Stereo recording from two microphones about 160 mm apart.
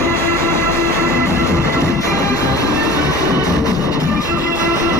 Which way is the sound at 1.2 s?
20° left (ahead or behind).